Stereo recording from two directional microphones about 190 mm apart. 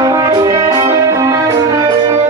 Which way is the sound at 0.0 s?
20° right (ahead or behind).